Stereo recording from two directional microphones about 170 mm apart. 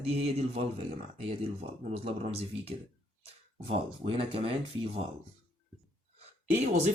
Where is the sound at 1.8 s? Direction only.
40° right (ahead or behind).